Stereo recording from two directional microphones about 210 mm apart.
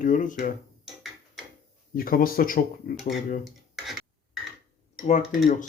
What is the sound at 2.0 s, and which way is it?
Speech, 45° left (ahead or behind).